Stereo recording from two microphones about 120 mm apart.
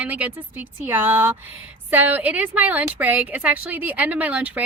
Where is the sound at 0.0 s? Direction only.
10° right (ahead or behind).